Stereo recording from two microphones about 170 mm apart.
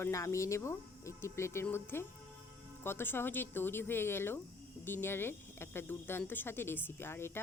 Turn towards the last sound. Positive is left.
turn(degrees=15)  # may be behind; listen again after turning